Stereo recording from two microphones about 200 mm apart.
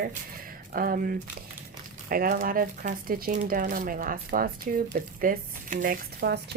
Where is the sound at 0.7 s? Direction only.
45° right (ahead or behind).